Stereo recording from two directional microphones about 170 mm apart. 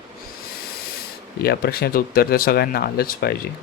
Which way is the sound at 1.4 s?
70° left (ahead or behind).